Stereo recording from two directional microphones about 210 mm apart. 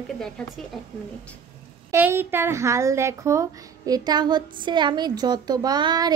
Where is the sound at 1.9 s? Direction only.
10° right (ahead or behind).